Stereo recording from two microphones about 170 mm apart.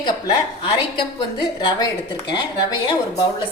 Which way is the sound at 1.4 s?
25° left (ahead or behind).